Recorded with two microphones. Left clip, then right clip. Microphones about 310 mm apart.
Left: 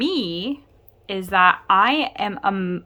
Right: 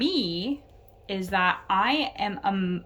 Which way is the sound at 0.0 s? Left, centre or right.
Centre.